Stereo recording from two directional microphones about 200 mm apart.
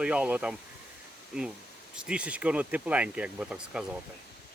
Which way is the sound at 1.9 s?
5° right (ahead or behind).